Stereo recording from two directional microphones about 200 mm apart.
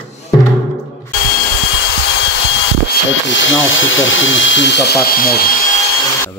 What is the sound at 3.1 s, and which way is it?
Speech, 70° left (ahead or behind).